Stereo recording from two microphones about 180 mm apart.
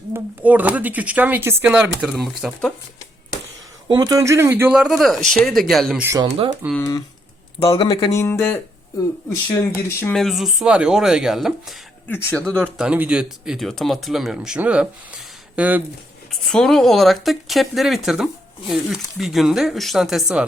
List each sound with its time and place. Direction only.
0.1 s speech: 10° right (ahead or behind)
3.8 s speech: 20° right (ahead or behind); by 6.0 s centre (ahead or behind)
6.2 s speech: 30° right (ahead or behind)
6.7 s speech: 20° left (ahead or behind)
8.2 s speech: 10° left (ahead or behind)
10.0 s speech: 5° left (ahead or behind)
12.0 s speech: 10° left (ahead or behind)
12.8 s speech: 5° right (ahead or behind)
16.3 s speech: centre (ahead or behind)